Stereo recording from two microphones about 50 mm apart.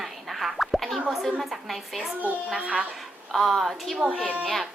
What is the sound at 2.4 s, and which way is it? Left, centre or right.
Speech, centre.